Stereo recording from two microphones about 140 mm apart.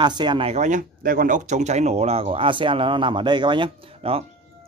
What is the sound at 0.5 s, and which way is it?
Speech, 60° right (ahead or behind).